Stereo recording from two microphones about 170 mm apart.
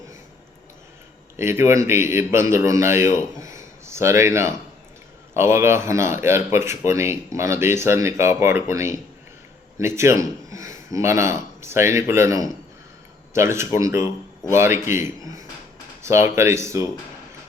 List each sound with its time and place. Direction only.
1.4 s a man's voice: 15° right (ahead or behind)